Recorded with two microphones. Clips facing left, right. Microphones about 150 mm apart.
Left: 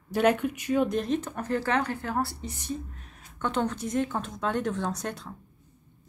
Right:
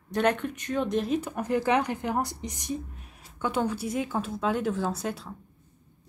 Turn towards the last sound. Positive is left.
turn(degrees=-5)  # may be behind; listen again after turning